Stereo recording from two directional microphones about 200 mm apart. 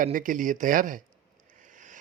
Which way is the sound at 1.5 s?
40° right (ahead or behind).